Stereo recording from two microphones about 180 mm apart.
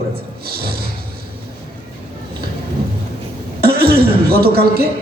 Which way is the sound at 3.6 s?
60° right (ahead or behind).